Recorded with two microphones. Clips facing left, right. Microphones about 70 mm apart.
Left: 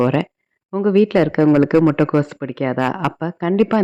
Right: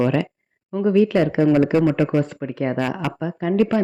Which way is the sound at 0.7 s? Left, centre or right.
Left.